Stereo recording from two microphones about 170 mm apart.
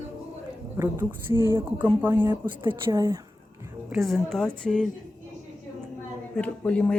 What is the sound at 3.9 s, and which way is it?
A woman's voice, centre (ahead or behind).